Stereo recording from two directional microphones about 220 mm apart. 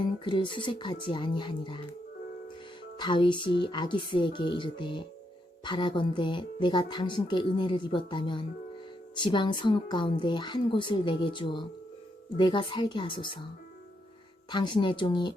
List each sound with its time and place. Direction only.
0.0 s speech: 20° left (ahead or behind)
3.0 s speech: 20° left (ahead or behind)
14.5 s speech: 20° left (ahead or behind)